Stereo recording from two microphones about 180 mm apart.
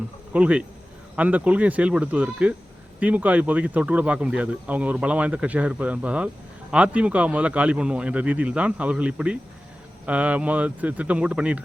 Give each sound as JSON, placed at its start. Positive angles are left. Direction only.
{"t": 0.3, "sound": "speech", "side_deg": -5}